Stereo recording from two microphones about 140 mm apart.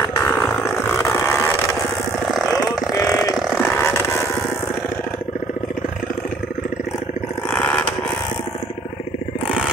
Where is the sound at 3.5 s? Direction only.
15° left (ahead or behind).